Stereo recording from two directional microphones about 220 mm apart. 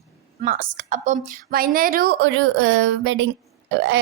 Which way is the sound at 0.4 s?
35° right (ahead or behind).